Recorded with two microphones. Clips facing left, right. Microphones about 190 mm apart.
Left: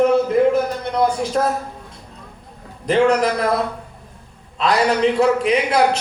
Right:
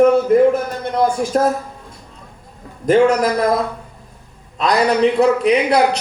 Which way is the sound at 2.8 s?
45° right (ahead or behind).